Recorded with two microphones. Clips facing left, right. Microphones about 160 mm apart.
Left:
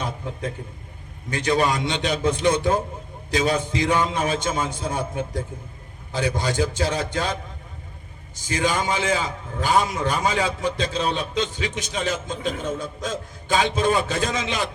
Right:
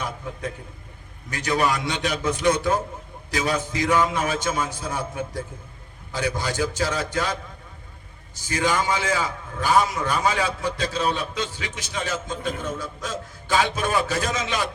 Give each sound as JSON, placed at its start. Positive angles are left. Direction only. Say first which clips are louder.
{"t": 0.0, "sound": "a sound", "louder": "left 2 dB", "side_deg": 25}
{"t": 1.3, "sound": "a man's voice", "louder": "left 2 dB", "side_deg": 25}
{"t": 8.4, "sound": "a man's voice", "louder": "even", "side_deg": 20}